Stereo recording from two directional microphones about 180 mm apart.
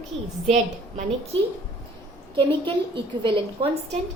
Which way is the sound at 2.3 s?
25° right (ahead or behind).